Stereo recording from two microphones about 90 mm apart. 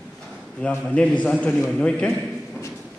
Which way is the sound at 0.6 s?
15° left (ahead or behind).